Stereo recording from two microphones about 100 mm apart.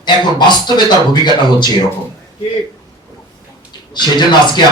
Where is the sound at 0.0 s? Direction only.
50° left (ahead or behind).